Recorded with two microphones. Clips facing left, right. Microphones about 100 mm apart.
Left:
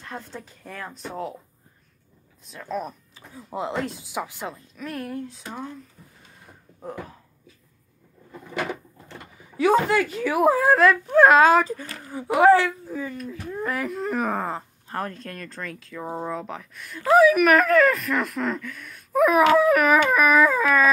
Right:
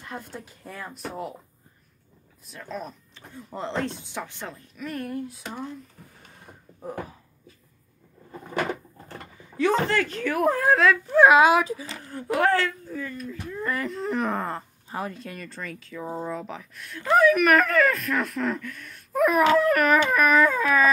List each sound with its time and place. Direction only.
0.0 s speech: 10° right (ahead or behind)
2.4 s speech: centre (ahead or behind)
8.5 s a sound: 45° right (ahead or behind)
9.6 s speech: 10° left (ahead or behind)
10.6 s speech: centre (ahead or behind)
12.0 s speech: 5° left (ahead or behind)
13.8 s speech: 5° left (ahead or behind)